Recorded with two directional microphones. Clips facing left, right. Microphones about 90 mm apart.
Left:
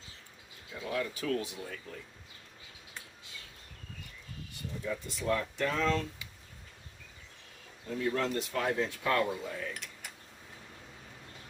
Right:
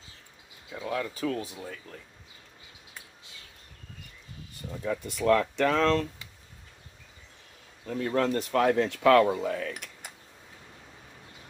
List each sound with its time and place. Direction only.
0.7 s speech: 30° right (ahead or behind)
4.8 s speech: 55° right (ahead or behind); by 6.0 s 90° right
7.9 s speech: 45° right (ahead or behind); by 9.9 s 65° right (ahead or behind)